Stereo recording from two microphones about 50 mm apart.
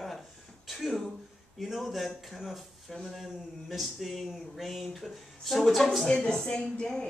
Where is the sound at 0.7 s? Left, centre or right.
Centre.